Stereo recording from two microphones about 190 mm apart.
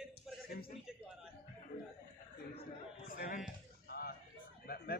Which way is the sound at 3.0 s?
50° left (ahead or behind).